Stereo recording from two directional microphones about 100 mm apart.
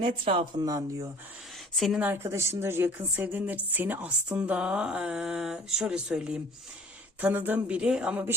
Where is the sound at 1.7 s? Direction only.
Centre (ahead or behind).